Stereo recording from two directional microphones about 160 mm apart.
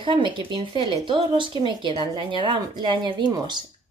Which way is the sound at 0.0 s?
30° right (ahead or behind).